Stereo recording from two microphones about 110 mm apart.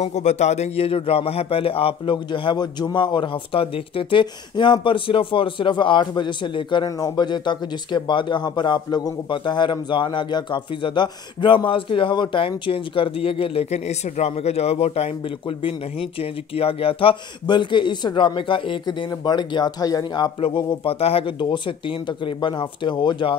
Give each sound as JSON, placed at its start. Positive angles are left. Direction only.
{"t": 0.0, "sound": "speech", "side_deg": 90}
{"t": 2.1, "sound": "speech", "side_deg": 45}
{"t": 6.9, "sound": "speech", "side_deg": 35}
{"t": 13.7, "sound": "speech", "side_deg": 90}
{"t": 20.3, "sound": "speech", "side_deg": 60}